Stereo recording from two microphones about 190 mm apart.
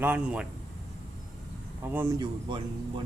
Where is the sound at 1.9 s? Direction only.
10° right (ahead or behind).